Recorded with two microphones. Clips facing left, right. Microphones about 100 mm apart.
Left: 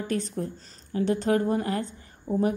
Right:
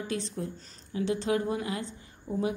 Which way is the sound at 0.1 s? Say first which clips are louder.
Left 6 dB; 45° left (ahead or behind).